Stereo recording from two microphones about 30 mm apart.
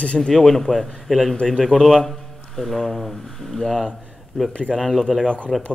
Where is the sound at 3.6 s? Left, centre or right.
Centre.